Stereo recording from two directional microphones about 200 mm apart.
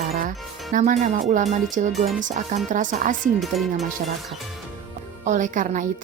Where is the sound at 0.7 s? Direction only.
40° right (ahead or behind).